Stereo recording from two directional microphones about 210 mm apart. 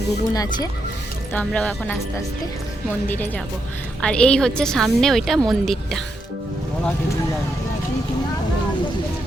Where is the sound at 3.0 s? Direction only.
10° left (ahead or behind).